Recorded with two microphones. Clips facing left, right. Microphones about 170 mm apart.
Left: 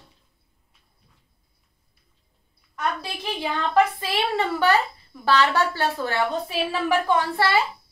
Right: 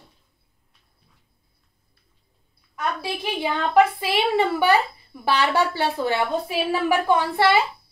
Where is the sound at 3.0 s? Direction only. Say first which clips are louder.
Right 3 dB; 10° right (ahead or behind).